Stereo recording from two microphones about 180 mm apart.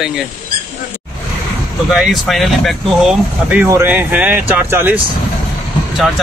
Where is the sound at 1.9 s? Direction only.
Centre (ahead or behind).